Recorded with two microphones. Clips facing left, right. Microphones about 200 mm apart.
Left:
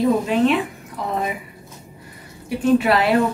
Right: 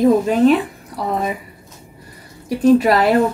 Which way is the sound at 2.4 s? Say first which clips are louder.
Right 4 dB; 40° right (ahead or behind).